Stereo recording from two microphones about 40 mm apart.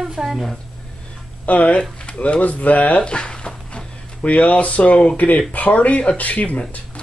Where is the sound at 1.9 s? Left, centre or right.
Left.